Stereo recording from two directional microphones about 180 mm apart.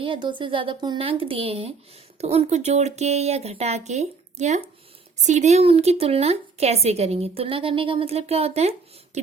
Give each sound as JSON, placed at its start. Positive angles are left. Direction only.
{"t": 0.0, "sound": "a woman's voice", "side_deg": -25}